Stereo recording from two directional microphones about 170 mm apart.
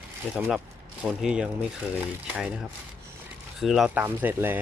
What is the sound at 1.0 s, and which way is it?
Speech, 5° right (ahead or behind).